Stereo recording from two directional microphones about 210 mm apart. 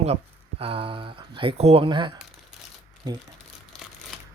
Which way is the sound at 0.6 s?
25° right (ahead or behind).